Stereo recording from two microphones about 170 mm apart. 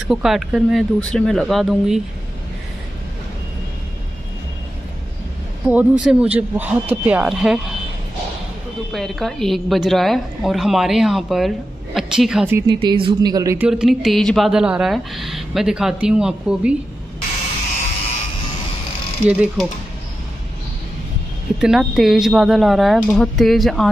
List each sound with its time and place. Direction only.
0.1 s a woman's voice: centre (ahead or behind)
5.7 s speech: 10° right (ahead or behind)
8.9 s a woman's voice: centre (ahead or behind)
12.6 s speech: 30° right (ahead or behind)
13.6 s a woman's voice: 5° right (ahead or behind)
19.2 s speech: 5° right (ahead or behind)
21.5 s a woman's voice: centre (ahead or behind)